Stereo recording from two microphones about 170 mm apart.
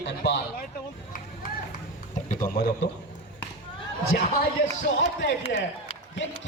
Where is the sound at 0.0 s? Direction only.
85° left.